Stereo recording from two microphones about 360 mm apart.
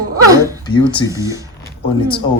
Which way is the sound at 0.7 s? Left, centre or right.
Centre.